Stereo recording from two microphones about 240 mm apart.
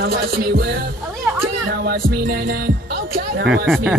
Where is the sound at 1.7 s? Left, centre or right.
Right.